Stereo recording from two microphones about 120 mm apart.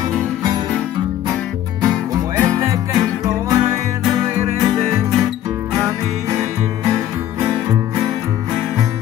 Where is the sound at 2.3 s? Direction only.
25° right (ahead or behind).